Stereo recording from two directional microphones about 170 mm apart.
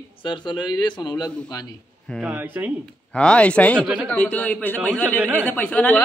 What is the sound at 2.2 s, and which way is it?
Speech, 10° right (ahead or behind).